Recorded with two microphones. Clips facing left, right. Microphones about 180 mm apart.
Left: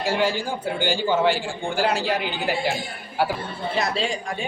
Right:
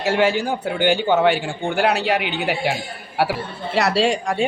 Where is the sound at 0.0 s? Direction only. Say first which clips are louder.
Right 4 dB; 70° right (ahead or behind).